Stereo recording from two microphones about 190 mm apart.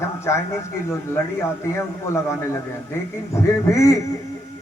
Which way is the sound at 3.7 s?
15° left (ahead or behind).